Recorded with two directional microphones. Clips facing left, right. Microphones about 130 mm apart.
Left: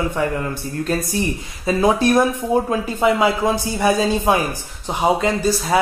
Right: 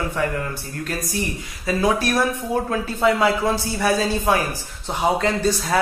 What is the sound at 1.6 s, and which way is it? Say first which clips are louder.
Speech: left 4 dB; 20° left (ahead or behind).